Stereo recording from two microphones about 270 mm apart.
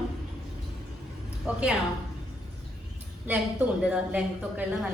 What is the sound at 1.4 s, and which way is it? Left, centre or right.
Speech, centre.